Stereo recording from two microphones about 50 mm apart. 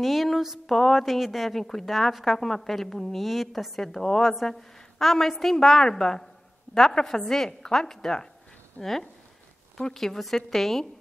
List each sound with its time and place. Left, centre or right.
0.0 s a woman's voice: centre
8.8 s speech: right
9.8 s a woman's voice: centre